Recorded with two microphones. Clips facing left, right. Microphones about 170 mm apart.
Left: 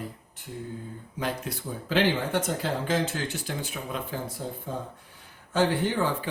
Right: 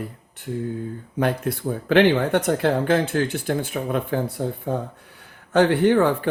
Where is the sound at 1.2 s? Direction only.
55° right (ahead or behind).